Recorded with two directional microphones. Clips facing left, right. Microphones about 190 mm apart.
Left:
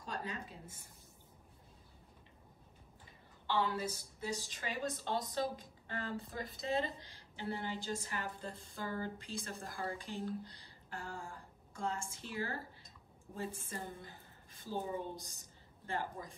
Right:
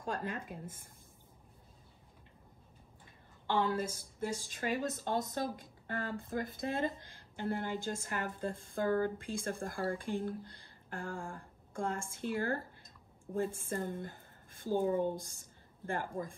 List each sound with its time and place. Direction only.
0.0 s a woman's voice: 50° right (ahead or behind)
3.4 s a woman's voice: 50° right (ahead or behind)